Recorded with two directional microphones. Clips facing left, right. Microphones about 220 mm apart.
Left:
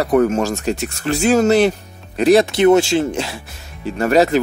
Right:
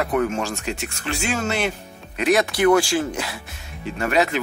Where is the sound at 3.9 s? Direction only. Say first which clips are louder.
Left 7 dB; 40° left (ahead or behind).